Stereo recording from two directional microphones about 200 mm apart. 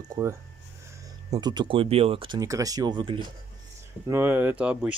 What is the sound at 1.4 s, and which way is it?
Speech, 20° right (ahead or behind).